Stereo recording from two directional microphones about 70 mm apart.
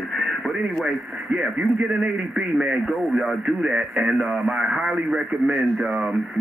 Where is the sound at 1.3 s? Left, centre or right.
Centre.